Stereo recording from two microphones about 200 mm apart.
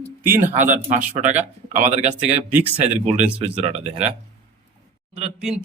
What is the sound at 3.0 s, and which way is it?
Speech, 35° right (ahead or behind).